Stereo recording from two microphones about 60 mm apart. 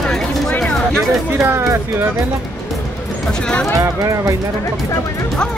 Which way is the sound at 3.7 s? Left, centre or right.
Right.